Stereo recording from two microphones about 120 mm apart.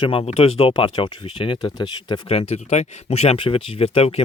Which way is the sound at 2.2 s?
65° left (ahead or behind).